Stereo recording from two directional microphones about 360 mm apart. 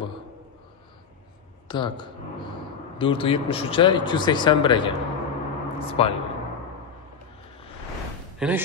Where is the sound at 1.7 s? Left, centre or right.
Centre.